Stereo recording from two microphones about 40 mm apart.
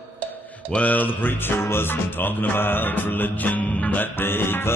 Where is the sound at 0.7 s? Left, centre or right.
Left.